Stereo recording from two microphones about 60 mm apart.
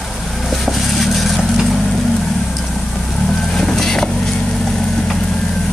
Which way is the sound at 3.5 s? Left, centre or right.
Centre.